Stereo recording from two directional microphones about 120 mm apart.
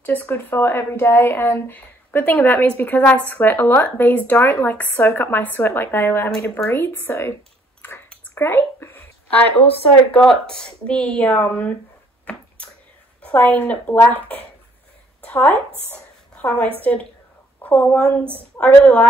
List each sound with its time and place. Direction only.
0.0 s speech: 15° left (ahead or behind)
8.4 s a sound: 20° left (ahead or behind)
10.1 s speech: 5° left (ahead or behind)
12.3 s finger snapping: 10° left (ahead or behind)
13.2 s speech: 10° left (ahead or behind)
15.9 s a sound: 15° left (ahead or behind)
16.8 s speech: 15° left (ahead or behind)